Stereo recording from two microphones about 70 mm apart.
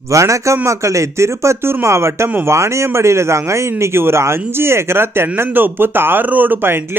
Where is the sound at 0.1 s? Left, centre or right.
Right.